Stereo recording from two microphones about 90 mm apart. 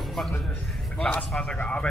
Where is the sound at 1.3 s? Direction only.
10° left (ahead or behind).